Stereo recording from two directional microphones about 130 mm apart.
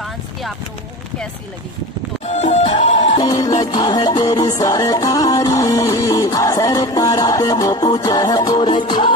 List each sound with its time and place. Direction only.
0.0 s a sound: centre (ahead or behind)
2.2 s music: 60° left (ahead or behind)
3.2 s music: 30° left (ahead or behind)